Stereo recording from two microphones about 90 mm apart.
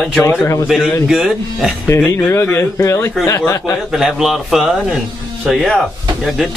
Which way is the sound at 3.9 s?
5° right (ahead or behind).